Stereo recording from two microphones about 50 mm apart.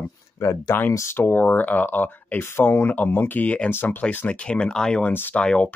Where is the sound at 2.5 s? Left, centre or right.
Left.